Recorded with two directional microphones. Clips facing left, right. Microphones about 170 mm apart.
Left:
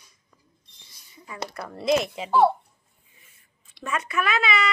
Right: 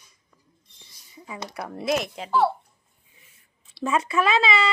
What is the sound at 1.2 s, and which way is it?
Speech, 15° right (ahead or behind).